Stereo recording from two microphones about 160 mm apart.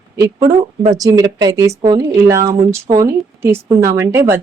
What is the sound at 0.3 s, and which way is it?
A woman's voice, 25° right (ahead or behind).